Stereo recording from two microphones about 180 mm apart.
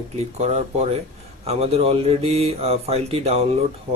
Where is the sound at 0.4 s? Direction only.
40° right (ahead or behind).